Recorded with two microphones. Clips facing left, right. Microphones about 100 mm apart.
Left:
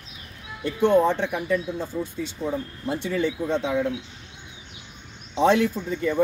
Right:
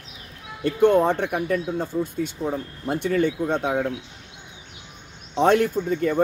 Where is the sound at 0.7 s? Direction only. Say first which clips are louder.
Right 2 dB; 55° right (ahead or behind).